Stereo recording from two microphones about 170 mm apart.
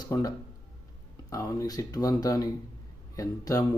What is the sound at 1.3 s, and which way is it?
Speech, 20° left (ahead or behind).